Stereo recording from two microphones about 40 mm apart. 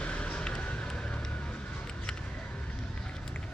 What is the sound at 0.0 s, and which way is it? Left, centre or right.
Run, left.